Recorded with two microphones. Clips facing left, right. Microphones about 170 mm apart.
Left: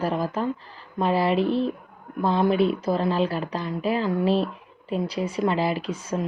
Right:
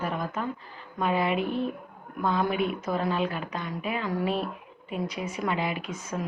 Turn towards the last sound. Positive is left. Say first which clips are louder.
# left 5 dB
turn(degrees=30)  # may be behind; listen again after turning